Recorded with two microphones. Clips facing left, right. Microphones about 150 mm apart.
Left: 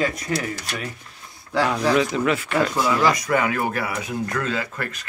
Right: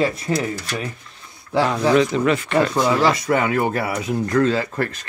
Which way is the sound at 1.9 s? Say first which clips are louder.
Right 3 dB; 5° left (ahead or behind).